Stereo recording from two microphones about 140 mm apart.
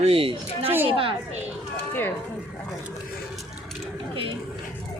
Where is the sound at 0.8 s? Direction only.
40° right (ahead or behind).